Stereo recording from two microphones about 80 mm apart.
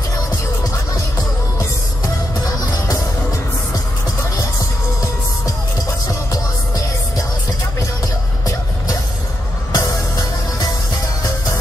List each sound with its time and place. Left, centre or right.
2.4 s music: left
9.8 s music: left